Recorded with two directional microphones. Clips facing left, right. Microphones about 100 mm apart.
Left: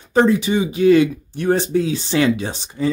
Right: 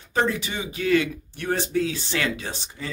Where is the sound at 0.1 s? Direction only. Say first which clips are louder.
Left 9 dB; 20° left (ahead or behind).